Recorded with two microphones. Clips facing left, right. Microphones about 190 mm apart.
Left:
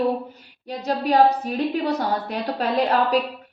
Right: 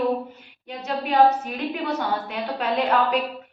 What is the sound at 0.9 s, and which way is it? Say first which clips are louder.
A woman's voice: left 1 dB; 35° left (ahead or behind).